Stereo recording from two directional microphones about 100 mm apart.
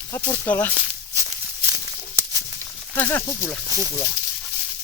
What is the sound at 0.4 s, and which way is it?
Speech, 15° left (ahead or behind).